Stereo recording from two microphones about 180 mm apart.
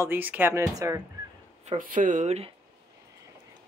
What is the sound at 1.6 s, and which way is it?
Speech, 45° right (ahead or behind).